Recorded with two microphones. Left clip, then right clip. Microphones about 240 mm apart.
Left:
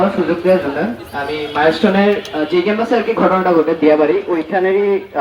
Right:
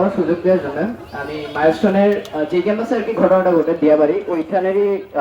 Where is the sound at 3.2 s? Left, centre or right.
Right.